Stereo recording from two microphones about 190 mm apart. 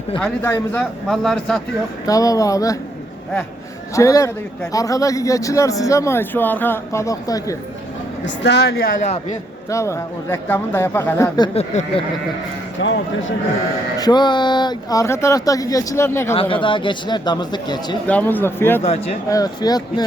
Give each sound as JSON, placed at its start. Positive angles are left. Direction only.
{"t": 0.2, "sound": "a man's voice", "side_deg": 10}
{"t": 1.0, "sound": "speech", "side_deg": 0}
{"t": 2.0, "sound": "a man's voice", "side_deg": 20}
{"t": 3.9, "sound": "a man's voice", "side_deg": 15}
{"t": 8.2, "sound": "a woman's voice", "side_deg": 65}
{"t": 9.6, "sound": "a man's voice", "side_deg": 15}
{"t": 11.5, "sound": "speech", "side_deg": 35}
{"t": 12.8, "sound": "speech", "side_deg": 70}
{"t": 14.0, "sound": "a man's voice", "side_deg": 25}
{"t": 16.3, "sound": "speech", "side_deg": 30}
{"t": 18.0, "sound": "a man's voice", "side_deg": 10}
{"t": 18.8, "sound": "speech", "side_deg": 35}
{"t": 19.3, "sound": "speech", "side_deg": 20}